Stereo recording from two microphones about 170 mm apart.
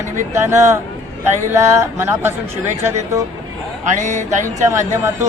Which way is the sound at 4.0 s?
45° right (ahead or behind).